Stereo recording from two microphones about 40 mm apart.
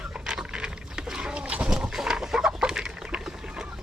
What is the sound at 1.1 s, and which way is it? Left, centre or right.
Bird, centre.